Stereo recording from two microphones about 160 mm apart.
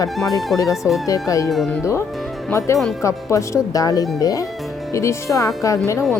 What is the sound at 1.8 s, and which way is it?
A woman's voice, 20° left (ahead or behind).